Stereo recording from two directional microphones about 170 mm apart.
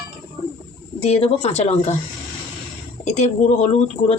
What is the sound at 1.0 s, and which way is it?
Speech, 35° left (ahead or behind).